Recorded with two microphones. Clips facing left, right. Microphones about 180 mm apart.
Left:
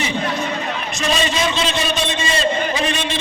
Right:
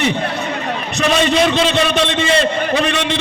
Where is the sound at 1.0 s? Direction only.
60° right (ahead or behind).